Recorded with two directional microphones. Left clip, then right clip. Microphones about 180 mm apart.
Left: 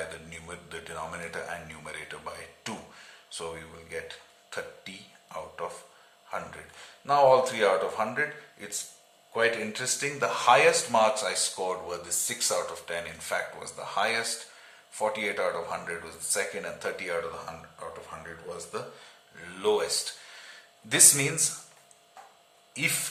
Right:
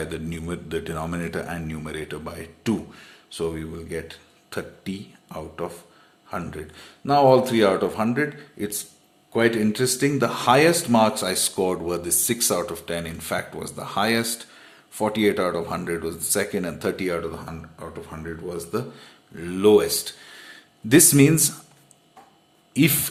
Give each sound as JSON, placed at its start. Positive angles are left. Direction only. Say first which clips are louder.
{"t": 0.1, "sound": "speech", "louder": "right 9 dB", "side_deg": -40}
{"t": 22.7, "sound": "speech", "louder": "right 7 dB", "side_deg": -40}